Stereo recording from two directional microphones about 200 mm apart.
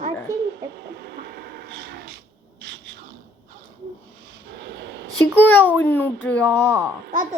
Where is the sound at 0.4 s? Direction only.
55° right (ahead or behind).